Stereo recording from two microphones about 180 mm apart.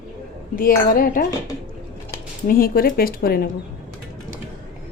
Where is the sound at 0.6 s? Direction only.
50° left (ahead or behind).